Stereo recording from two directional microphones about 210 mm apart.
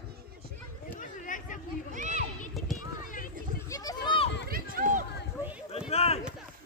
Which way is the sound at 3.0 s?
40° left (ahead or behind).